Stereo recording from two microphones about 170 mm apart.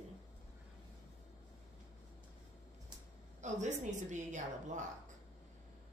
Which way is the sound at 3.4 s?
45° right (ahead or behind).